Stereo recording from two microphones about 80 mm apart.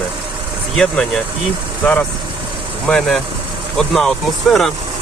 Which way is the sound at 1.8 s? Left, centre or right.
Left.